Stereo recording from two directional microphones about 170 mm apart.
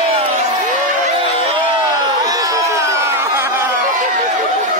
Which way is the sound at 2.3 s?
20° right (ahead or behind).